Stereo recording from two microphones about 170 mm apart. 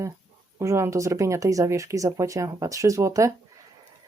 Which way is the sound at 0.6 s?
15° right (ahead or behind).